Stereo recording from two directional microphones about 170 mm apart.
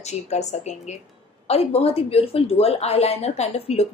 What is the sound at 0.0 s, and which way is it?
Speech, 40° left (ahead or behind).